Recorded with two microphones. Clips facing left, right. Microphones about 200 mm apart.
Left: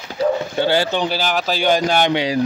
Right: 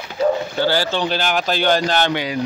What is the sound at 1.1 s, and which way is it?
Speech, 5° left (ahead or behind).